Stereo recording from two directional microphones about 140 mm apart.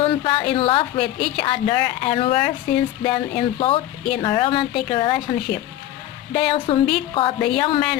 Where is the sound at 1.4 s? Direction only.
40° left (ahead or behind).